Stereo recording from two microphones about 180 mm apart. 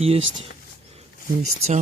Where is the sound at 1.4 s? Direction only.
35° right (ahead or behind).